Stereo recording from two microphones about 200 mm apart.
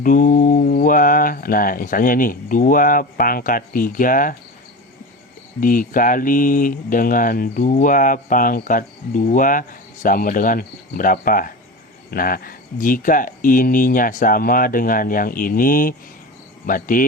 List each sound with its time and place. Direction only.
0.0 s speech: 40° left (ahead or behind)
5.5 s speech: 45° left (ahead or behind)